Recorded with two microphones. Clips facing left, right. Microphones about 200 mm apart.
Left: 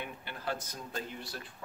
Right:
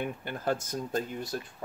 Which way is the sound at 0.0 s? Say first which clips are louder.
Right 7 dB; 50° right (ahead or behind).